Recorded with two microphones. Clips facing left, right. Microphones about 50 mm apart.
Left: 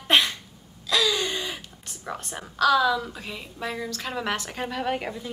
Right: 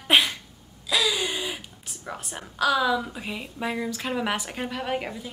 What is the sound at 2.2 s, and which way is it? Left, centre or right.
A woman's voice, centre.